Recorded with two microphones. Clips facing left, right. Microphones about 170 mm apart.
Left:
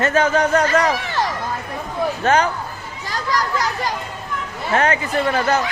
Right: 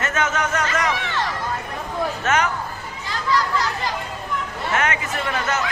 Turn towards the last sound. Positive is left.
turn(degrees=35)  # may be behind; listen again after turning